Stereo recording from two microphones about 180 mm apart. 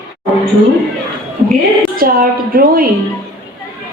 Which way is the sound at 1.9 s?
55° right (ahead or behind).